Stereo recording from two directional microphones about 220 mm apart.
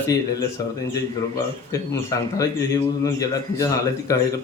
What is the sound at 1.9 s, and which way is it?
A man's voice, 15° left (ahead or behind).